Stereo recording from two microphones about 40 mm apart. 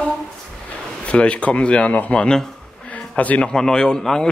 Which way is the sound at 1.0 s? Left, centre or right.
Left.